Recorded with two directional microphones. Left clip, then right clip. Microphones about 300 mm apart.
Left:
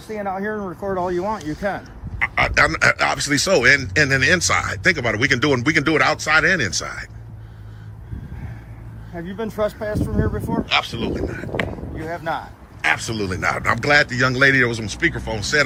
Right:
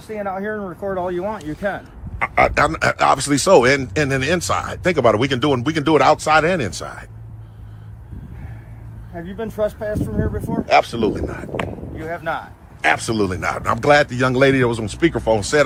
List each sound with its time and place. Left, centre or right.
0.1 s speech: centre
1.8 s a man's voice: centre
9.1 s speech: centre
10.7 s a man's voice: right
11.9 s speech: centre
12.8 s a man's voice: centre